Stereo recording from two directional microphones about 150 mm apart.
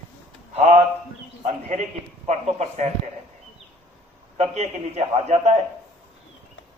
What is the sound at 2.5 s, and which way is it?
Speech, 50° right (ahead or behind).